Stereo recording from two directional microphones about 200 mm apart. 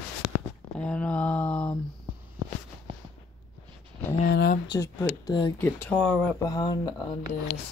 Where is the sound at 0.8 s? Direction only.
5° left (ahead or behind).